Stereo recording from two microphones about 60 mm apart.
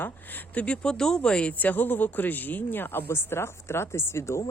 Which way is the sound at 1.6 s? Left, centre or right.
Left.